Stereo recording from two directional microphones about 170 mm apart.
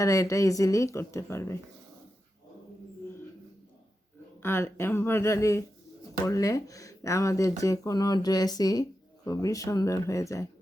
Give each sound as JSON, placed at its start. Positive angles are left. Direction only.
{"t": 0.0, "sound": "speech", "side_deg": 20}
{"t": 4.4, "sound": "speech", "side_deg": 15}